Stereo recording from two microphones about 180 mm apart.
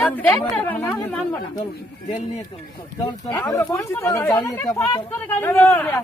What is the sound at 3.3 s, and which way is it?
Speech, 15° left (ahead or behind).